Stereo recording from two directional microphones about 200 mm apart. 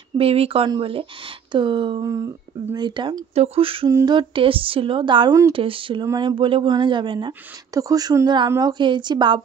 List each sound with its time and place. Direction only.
0.2 s speech: 30° right (ahead or behind)